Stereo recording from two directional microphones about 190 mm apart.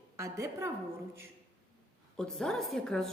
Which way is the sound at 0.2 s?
15° right (ahead or behind).